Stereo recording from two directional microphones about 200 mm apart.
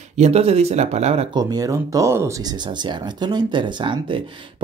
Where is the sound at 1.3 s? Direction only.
20° right (ahead or behind).